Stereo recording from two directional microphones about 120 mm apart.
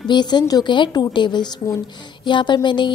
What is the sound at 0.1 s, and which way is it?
A woman's voice, 35° left (ahead or behind).